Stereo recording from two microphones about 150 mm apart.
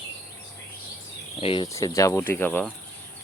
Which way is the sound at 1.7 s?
20° left (ahead or behind).